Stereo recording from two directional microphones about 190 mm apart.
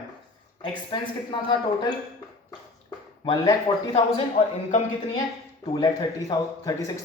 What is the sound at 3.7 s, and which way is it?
Speech, 25° left (ahead or behind).